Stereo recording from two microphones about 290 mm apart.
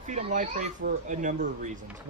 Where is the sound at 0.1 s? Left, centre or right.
Right.